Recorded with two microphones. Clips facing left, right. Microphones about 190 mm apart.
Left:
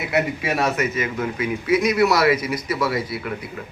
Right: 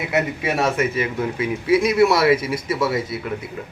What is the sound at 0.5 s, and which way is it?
Speech, 30° right (ahead or behind).